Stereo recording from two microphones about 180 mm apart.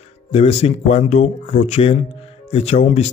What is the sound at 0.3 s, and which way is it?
Speech, 35° left (ahead or behind).